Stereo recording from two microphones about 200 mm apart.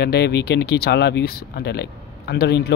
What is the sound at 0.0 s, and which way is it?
Speech, 55° left (ahead or behind).